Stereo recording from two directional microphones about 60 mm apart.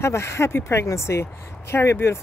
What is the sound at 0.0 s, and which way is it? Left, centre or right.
Speech, left.